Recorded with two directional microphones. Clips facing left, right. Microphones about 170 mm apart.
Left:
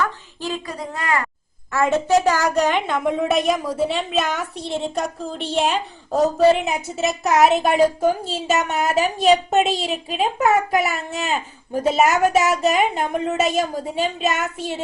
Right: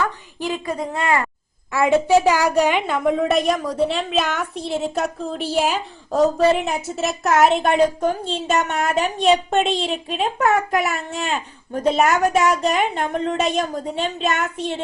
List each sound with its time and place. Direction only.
0.4 s a woman's voice: 20° right (ahead or behind)
1.7 s a woman's voice: 15° right (ahead or behind); by 14.8 s centre (ahead or behind)